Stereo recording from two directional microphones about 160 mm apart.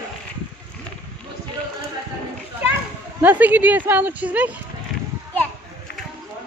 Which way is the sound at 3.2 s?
10° right (ahead or behind).